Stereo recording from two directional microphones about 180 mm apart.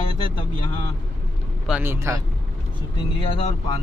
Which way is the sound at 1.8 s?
15° right (ahead or behind).